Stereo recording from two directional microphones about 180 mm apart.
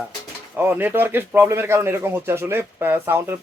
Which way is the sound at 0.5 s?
10° right (ahead or behind).